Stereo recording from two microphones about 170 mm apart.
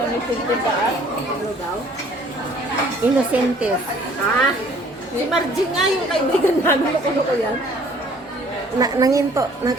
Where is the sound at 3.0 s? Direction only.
10° right (ahead or behind).